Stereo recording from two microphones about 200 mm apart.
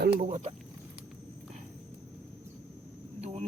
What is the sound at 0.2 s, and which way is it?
Speech, 35° right (ahead or behind).